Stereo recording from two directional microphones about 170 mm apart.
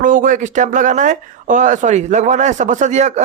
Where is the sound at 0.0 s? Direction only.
50° right (ahead or behind).